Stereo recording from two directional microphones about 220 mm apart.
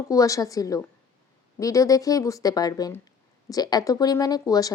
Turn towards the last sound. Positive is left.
turn(degrees=15)  # may be behind; listen again after turning